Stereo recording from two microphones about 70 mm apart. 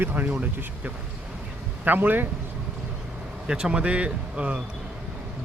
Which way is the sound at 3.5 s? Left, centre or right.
Centre.